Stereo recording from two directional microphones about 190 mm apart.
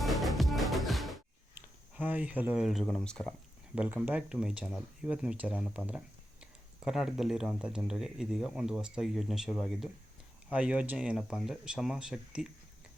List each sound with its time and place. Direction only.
0.0 s music: centre (ahead or behind)
1.5 s speech: 10° right (ahead or behind)
3.8 s speech: 10° right (ahead or behind)